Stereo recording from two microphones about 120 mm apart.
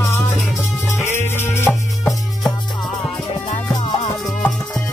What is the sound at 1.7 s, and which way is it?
Music, centre (ahead or behind).